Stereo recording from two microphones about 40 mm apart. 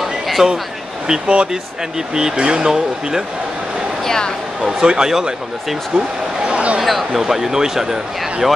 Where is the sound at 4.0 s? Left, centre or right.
Centre.